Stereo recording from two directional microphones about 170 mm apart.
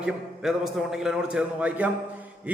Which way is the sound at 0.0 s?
5° right (ahead or behind).